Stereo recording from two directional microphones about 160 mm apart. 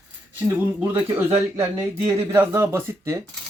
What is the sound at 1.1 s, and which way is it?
Speech, 15° right (ahead or behind).